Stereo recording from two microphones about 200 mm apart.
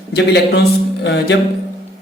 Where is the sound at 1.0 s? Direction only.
60° left (ahead or behind).